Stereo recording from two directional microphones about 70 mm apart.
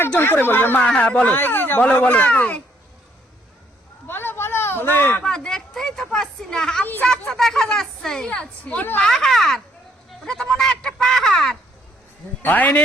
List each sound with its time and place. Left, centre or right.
0.2 s speech: left
0.9 s speech: centre
4.0 s a sound: left
5.2 s speech: centre
6.8 s speech: left
7.3 s speech: centre
12.4 s speech: left